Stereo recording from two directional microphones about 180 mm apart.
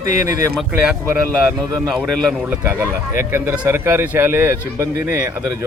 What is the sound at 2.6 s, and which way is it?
Speech, 15° right (ahead or behind).